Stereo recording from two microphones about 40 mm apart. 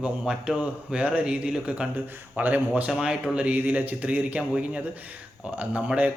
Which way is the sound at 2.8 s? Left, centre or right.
Right.